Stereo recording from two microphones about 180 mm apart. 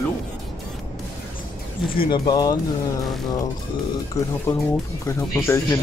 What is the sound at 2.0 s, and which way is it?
Speech, 25° left (ahead or behind).